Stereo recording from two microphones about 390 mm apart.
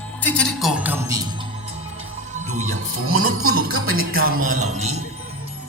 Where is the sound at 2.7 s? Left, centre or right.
Right.